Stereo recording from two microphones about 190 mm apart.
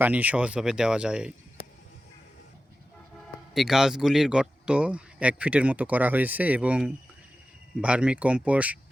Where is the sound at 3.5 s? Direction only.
Centre (ahead or behind).